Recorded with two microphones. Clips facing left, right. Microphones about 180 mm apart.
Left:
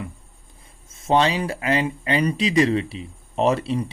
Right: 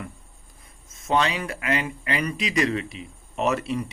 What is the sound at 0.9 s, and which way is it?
Speech, 30° left (ahead or behind).